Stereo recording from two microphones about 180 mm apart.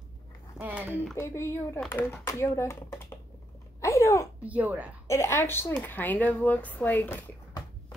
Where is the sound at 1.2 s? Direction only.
15° left (ahead or behind).